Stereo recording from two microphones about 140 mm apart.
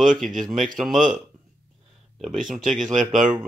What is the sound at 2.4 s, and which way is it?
Speech, 5° right (ahead or behind).